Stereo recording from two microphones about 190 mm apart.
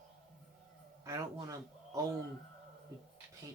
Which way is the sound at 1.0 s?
15° right (ahead or behind).